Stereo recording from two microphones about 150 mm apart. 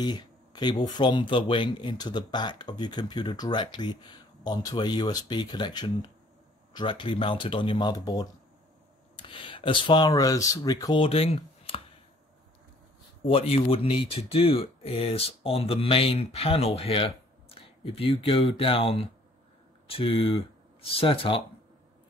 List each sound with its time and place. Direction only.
0.0 s speech: 30° left (ahead or behind)
11.0 s speech: 40° left (ahead or behind)
13.2 s speech: 40° left (ahead or behind)